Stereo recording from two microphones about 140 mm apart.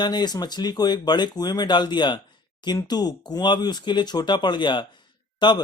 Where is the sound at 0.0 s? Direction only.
30° left (ahead or behind).